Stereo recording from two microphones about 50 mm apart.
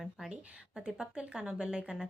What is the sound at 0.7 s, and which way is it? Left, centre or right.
Speech, centre.